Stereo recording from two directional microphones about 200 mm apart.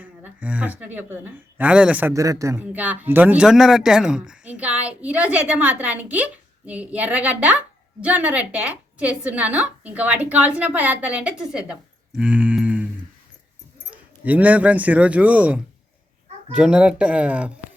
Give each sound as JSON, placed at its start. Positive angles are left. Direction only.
{"t": 0.0, "sound": "a woman's voice", "side_deg": -5}
{"t": 13.9, "sound": "speech", "side_deg": -5}